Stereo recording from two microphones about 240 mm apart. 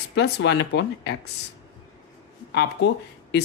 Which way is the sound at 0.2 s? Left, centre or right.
Left.